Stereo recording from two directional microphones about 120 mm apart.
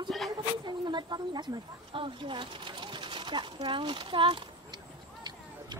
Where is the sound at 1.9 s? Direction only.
45° right (ahead or behind).